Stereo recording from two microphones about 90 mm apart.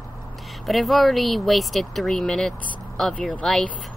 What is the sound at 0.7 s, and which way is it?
Speech, centre (ahead or behind).